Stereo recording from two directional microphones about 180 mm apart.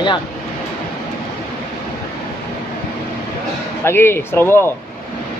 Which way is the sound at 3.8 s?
10° left (ahead or behind).